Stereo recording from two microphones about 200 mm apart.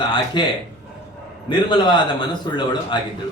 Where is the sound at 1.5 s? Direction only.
25° left (ahead or behind).